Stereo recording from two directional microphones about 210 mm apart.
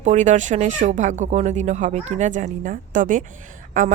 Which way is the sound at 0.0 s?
35° right (ahead or behind).